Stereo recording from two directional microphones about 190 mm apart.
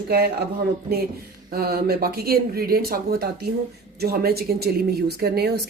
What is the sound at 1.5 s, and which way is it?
A woman's voice, 55° right (ahead or behind).